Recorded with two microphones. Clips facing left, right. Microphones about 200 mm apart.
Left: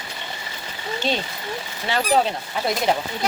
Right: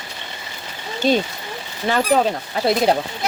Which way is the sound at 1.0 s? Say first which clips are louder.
Right 8 dB; 45° right (ahead or behind).